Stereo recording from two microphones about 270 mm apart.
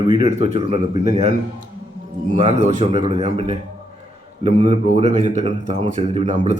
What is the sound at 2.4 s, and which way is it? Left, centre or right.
Speech, right.